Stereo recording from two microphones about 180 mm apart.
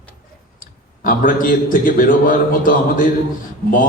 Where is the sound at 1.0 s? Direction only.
50° left (ahead or behind).